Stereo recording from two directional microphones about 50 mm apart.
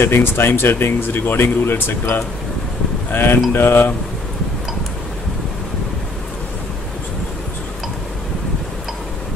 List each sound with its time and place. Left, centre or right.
0.0 s speech: left